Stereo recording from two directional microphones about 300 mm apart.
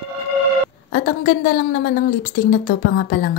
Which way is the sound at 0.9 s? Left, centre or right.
Left.